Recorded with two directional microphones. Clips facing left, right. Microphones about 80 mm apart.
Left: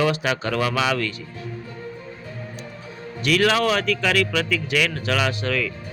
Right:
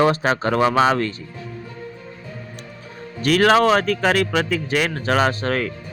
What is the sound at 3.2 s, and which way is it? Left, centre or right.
Speech, right.